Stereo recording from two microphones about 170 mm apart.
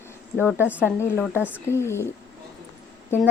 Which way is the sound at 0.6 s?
10° right (ahead or behind).